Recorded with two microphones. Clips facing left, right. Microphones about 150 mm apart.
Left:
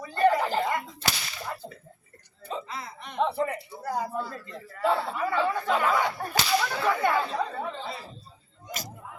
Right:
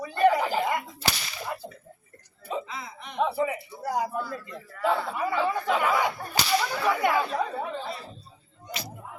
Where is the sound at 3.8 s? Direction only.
15° right (ahead or behind).